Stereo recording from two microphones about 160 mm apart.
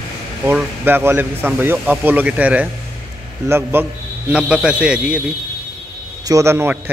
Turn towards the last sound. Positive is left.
turn(degrees=-15)  # may be behind; listen again after turning